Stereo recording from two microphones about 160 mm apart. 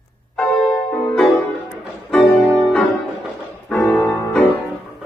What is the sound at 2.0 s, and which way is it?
Music, 5° left (ahead or behind).